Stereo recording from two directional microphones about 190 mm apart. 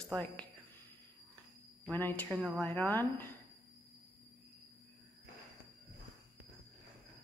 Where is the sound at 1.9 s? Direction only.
10° left (ahead or behind).